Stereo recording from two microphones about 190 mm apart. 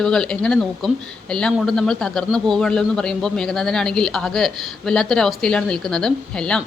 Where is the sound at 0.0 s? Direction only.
5° left (ahead or behind).